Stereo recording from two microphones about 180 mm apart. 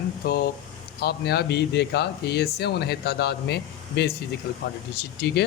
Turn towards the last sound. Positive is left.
turn(degrees=65)  # may be behind; listen again after turning